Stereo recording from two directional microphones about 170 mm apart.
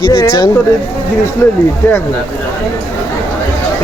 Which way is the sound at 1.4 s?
15° left (ahead or behind).